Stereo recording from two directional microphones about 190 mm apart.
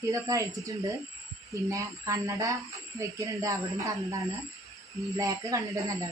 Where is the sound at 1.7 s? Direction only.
15° right (ahead or behind).